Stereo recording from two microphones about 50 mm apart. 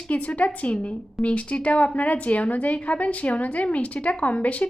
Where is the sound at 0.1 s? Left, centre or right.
Left.